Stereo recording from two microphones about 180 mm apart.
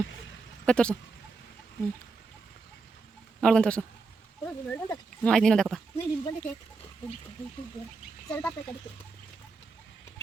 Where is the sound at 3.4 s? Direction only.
5° left (ahead or behind).